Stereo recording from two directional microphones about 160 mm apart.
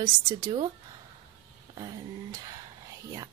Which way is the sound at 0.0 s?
25° right (ahead or behind).